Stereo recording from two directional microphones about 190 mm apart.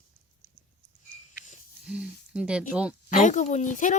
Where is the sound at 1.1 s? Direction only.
40° left (ahead or behind).